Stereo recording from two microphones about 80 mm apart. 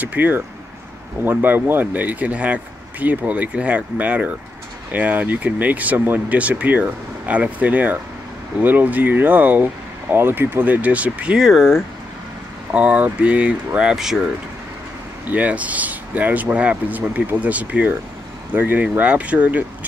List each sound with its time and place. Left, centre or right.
0.0 s speech: right
11.3 s speech: centre
12.7 s speech: centre
15.2 s speech: centre